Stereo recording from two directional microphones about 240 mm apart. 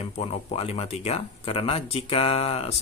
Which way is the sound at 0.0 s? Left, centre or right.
Left.